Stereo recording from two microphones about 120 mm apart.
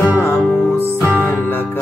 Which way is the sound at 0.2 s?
25° left (ahead or behind).